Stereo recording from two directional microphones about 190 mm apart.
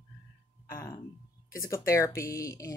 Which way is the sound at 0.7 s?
15° left (ahead or behind).